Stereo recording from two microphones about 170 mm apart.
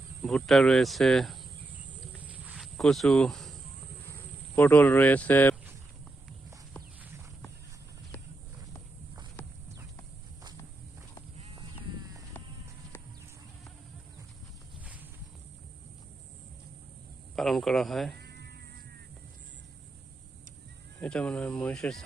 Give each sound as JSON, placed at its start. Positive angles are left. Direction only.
{"t": 0.2, "sound": "speech", "side_deg": 0}
{"t": 2.2, "sound": "cricket", "side_deg": 0}
{"t": 4.5, "sound": "speech", "side_deg": 10}
{"t": 17.3, "sound": "a sound", "side_deg": 0}
{"t": 18.2, "sound": "music", "side_deg": -75}
{"t": 21.0, "sound": "speech", "side_deg": 5}